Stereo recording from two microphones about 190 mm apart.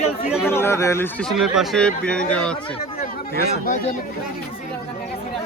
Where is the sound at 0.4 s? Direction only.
10° left (ahead or behind).